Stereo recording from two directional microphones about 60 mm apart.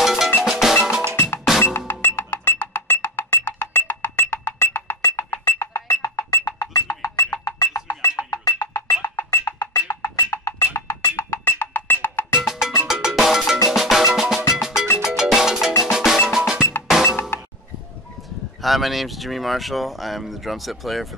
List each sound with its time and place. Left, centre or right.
0.0 s percussion: centre
1.1 s music: left
5.7 s music: left
8.7 s music: left
12.4 s music: centre
12.8 s cowbell: centre
13.7 s music: centre
15.8 s percussion: centre
16.3 s drum: centre
16.9 s music: centre
18.6 s speech: centre